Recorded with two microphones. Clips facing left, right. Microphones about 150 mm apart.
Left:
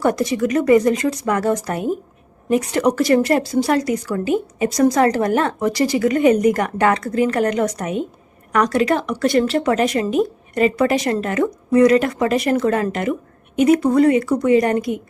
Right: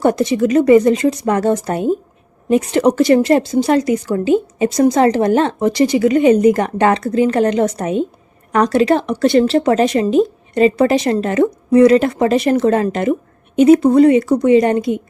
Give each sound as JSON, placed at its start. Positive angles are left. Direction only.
{"t": 0.0, "sound": "speech", "side_deg": -25}